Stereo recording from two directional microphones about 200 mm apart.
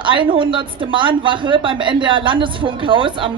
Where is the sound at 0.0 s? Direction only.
25° right (ahead or behind).